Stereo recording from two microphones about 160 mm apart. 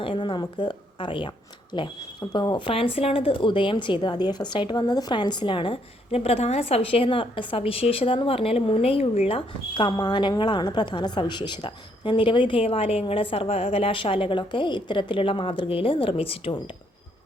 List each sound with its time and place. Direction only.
0.0 s speech: 30° left (ahead or behind)